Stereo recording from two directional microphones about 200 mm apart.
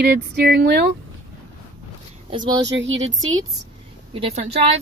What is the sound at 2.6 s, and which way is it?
Speech, 65° right (ahead or behind).